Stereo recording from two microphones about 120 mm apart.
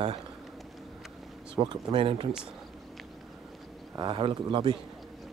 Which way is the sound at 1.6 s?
45° right (ahead or behind).